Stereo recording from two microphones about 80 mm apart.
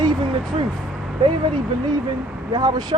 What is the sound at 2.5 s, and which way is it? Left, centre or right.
Speech, right.